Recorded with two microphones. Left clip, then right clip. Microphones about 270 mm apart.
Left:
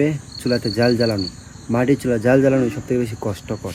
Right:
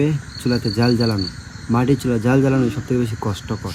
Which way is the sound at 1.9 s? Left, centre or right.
Centre.